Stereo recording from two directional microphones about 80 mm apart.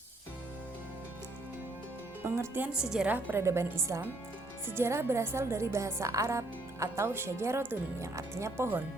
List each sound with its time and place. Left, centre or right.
2.2 s speech: right
2.7 s a woman's voice: centre
3.1 s speech: right
3.4 s a woman's voice: right